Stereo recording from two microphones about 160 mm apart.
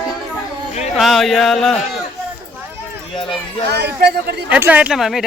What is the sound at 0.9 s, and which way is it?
Speech, centre (ahead or behind).